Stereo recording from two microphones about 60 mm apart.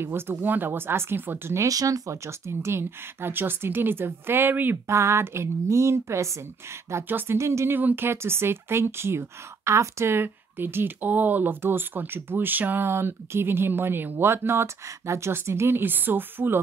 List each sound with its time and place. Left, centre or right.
0.0 s speech: right
1.6 s speech: right
4.8 s speech: right
7.1 s speech: right
7.3 s speech: right
7.7 s speech: right